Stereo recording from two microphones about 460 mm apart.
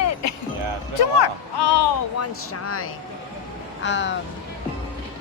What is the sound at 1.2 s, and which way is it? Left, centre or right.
Speech, left.